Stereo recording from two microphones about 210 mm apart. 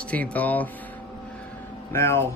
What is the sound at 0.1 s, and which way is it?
Speech, 5° left (ahead or behind).